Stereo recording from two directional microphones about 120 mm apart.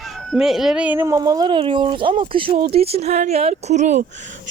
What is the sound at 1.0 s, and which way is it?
Speech, 25° right (ahead or behind).